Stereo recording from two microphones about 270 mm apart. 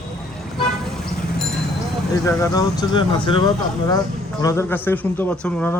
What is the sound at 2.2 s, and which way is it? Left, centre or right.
Speech, centre.